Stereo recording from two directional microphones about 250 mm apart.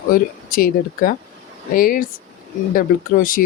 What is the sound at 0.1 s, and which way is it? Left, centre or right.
Speech, left.